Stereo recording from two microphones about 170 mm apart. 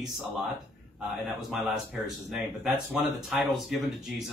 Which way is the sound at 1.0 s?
Centre (ahead or behind).